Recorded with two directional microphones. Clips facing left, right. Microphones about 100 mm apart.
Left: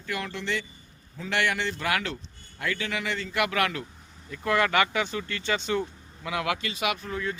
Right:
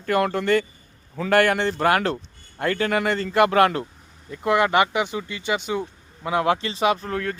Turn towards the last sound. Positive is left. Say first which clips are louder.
# right 5 dB
turn(degrees=-60)  # may be behind; listen again after turning